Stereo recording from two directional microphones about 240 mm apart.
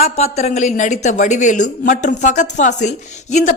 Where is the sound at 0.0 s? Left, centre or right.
Left.